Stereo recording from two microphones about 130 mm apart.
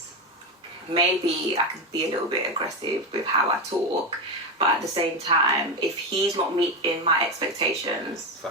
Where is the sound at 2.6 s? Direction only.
35° right (ahead or behind).